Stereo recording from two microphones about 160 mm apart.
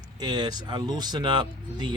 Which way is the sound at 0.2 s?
25° right (ahead or behind).